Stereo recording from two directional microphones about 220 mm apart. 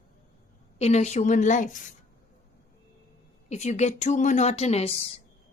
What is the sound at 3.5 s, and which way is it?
A woman's voice, 30° left (ahead or behind).